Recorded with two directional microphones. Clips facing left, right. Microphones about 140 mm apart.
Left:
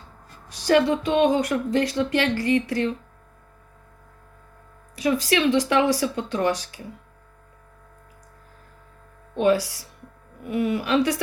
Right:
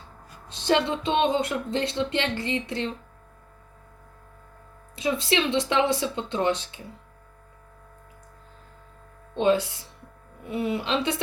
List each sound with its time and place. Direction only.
0.4 s speech: 25° right (ahead or behind)
4.9 s speech: 25° right (ahead or behind)
9.4 s speech: 25° right (ahead or behind)